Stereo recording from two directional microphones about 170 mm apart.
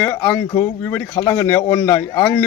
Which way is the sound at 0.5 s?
15° left (ahead or behind).